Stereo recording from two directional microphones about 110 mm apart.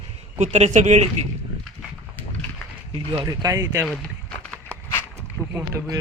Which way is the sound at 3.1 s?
35° right (ahead or behind).